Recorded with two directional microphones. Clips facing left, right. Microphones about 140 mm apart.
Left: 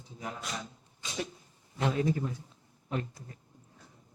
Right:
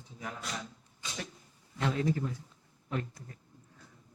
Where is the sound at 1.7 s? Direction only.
20° left (ahead or behind).